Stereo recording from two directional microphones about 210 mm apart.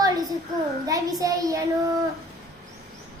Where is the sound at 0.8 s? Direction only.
15° right (ahead or behind).